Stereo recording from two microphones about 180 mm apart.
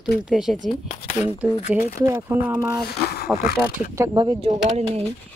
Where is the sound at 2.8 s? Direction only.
60° left (ahead or behind).